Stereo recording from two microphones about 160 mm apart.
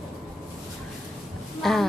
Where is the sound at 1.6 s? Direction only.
Centre (ahead or behind).